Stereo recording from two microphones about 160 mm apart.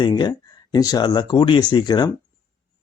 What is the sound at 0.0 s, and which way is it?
Speech, 30° left (ahead or behind).